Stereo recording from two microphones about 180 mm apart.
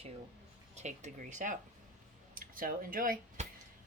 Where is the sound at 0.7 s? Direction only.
40° right (ahead or behind).